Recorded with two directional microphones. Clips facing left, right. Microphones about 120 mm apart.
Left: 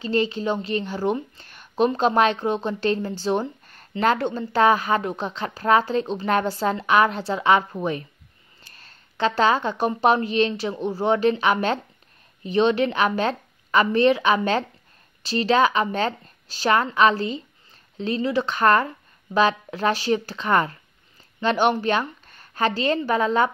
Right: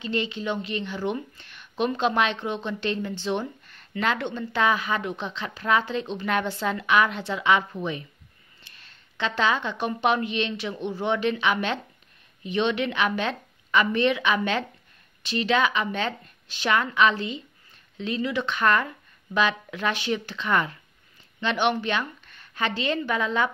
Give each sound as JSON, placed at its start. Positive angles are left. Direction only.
{"t": 0.0, "sound": "a woman's voice", "side_deg": 35}